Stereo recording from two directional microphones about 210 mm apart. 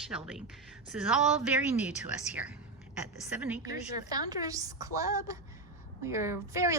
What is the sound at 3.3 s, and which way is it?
Speech, 5° right (ahead or behind).